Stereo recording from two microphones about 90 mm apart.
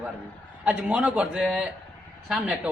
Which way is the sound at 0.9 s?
15° right (ahead or behind).